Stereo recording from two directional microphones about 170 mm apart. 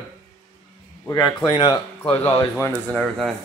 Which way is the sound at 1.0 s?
25° left (ahead or behind).